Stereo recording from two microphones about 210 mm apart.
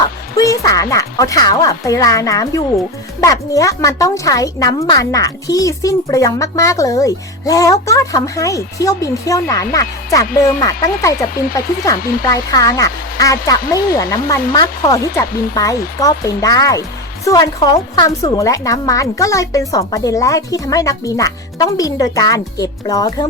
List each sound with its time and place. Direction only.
0.3 s speech: 15° left (ahead or behind)
11.9 s speech: 45° left (ahead or behind)
12.2 s speech: 15° left (ahead or behind)